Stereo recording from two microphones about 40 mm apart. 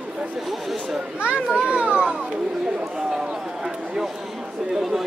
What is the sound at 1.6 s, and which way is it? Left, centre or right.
Speech, right.